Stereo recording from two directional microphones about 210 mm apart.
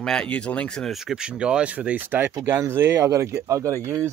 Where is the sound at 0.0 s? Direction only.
5° left (ahead or behind).